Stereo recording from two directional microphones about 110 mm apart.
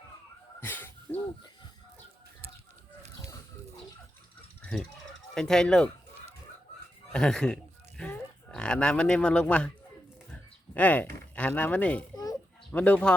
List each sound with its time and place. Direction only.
0.6 s a sound: 20° left (ahead or behind)
4.6 s speech: 5° left (ahead or behind)
7.1 s speech: 5° left (ahead or behind)
10.8 s speech: 15° left (ahead or behind)
12.1 s a sound: 35° left (ahead or behind)
12.7 s speech: 10° left (ahead or behind)